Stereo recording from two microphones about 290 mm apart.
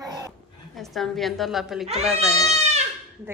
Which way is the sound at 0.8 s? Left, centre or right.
Centre.